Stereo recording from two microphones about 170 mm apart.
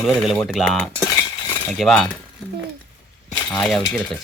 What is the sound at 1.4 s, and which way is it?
Cutlery, 25° left (ahead or behind).